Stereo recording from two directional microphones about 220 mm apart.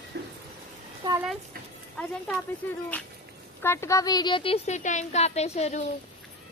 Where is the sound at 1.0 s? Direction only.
20° right (ahead or behind).